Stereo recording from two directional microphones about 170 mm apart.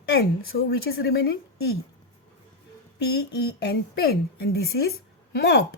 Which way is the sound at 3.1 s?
70° left (ahead or behind).